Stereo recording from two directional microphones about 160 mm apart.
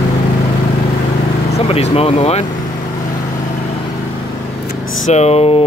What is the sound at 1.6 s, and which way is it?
Speech, 40° left (ahead or behind).